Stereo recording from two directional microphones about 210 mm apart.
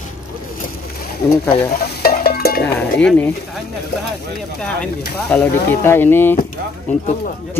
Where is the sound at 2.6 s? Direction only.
5° left (ahead or behind).